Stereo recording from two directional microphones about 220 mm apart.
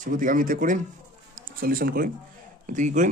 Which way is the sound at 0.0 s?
40° right (ahead or behind).